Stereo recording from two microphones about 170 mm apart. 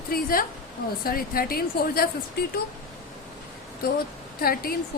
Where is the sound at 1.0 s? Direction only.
60° left (ahead or behind).